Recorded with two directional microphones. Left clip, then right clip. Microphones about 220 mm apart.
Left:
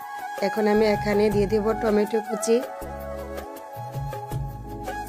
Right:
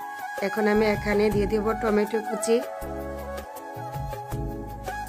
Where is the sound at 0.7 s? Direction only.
15° left (ahead or behind).